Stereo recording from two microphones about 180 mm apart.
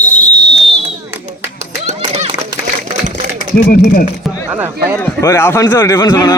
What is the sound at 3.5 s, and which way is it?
Speech, 55° left (ahead or behind).